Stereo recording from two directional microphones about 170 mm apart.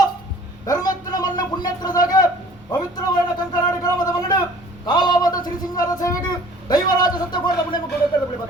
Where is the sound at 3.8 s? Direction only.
20° left (ahead or behind).